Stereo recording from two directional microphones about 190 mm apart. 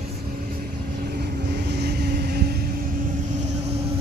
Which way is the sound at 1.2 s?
60° right (ahead or behind).